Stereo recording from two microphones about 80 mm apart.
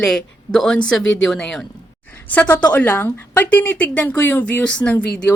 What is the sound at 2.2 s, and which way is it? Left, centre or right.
A woman's voice, centre.